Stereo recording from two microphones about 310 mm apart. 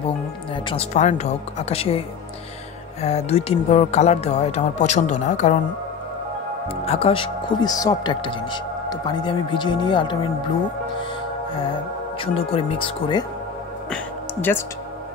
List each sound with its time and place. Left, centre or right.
0.7 s speech: left
6.7 s speech: centre
12.2 s speech: centre
13.8 s music: centre